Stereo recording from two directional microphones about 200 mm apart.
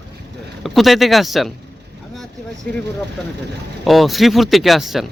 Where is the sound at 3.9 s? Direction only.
Centre (ahead or behind).